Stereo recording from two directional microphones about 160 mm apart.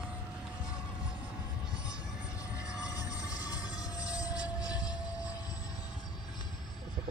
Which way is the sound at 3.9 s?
25° left (ahead or behind).